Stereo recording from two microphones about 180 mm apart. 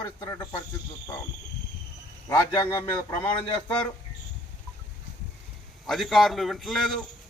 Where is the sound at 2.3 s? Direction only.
20° left (ahead or behind).